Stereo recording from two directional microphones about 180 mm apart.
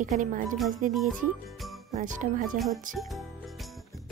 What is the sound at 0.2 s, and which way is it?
Speech, 45° right (ahead or behind).